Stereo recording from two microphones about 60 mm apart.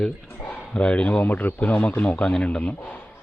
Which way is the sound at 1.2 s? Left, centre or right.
Left.